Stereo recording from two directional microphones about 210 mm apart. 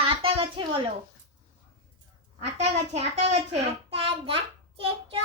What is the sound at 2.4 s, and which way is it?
A child's voice, 30° right (ahead or behind).